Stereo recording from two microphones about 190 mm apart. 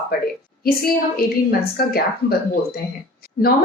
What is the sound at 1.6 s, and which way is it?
Speech, 55° left (ahead or behind).